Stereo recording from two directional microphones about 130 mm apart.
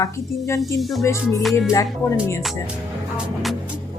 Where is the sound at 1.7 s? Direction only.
20° left (ahead or behind).